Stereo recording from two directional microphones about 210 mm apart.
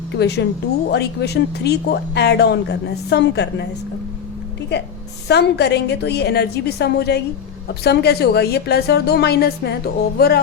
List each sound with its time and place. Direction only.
0.2 s speech: 55° left (ahead or behind)
5.3 s speech: 55° left (ahead or behind)